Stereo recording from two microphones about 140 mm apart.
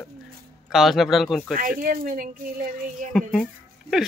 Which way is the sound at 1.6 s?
85° right.